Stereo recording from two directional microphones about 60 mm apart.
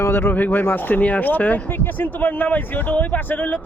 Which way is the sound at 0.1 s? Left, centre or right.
Left.